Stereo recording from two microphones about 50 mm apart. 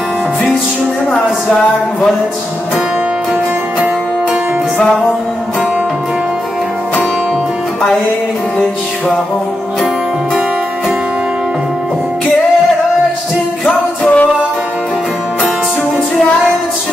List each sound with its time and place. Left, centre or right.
13.7 s music: left